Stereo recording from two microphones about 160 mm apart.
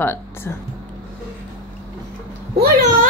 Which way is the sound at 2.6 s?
55° right (ahead or behind).